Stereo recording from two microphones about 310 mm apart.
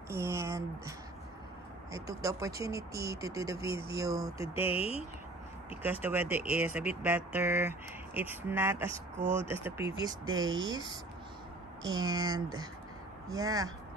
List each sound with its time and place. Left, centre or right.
0.1 s speech: centre
4.6 s speech: centre
6.0 s speech: centre